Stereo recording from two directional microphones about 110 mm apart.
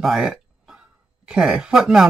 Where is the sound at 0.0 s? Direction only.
5° right (ahead or behind).